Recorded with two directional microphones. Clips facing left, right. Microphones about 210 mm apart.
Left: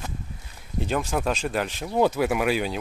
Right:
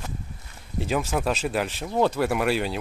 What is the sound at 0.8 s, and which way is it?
Speech, 5° right (ahead or behind).